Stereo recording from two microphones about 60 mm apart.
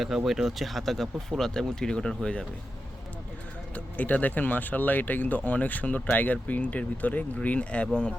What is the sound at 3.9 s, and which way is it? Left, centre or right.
Speech, left.